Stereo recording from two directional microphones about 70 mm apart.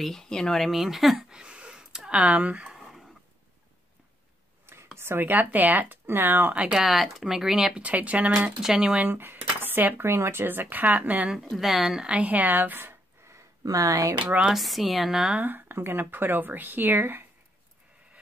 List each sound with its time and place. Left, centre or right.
0.0 s speech: centre
4.9 s speech: right
6.5 s speech: centre
6.8 s speech: centre
8.5 s speech: centre
9.0 s speech: right
11.5 s speech: centre; by 13.4 s right
13.7 s speech: right
14.2 s speech: centre
14.5 s a woman's voice: centre
15.4 s speech: right